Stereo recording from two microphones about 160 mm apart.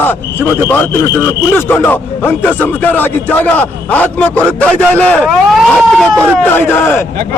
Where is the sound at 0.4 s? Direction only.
10° left (ahead or behind).